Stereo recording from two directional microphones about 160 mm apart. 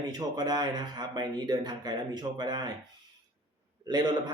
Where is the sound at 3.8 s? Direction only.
25° right (ahead or behind).